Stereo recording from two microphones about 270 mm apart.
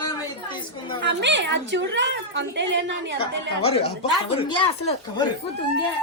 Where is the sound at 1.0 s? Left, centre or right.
Right.